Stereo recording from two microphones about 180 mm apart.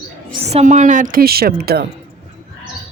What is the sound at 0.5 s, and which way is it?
A woman's voice, 40° right (ahead or behind).